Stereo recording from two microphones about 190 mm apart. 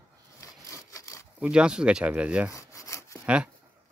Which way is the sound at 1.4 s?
5° right (ahead or behind).